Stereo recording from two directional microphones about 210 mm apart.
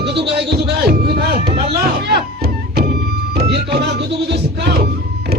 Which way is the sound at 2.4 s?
50° right (ahead or behind).